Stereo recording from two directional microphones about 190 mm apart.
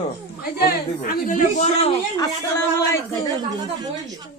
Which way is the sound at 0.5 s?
50° left (ahead or behind).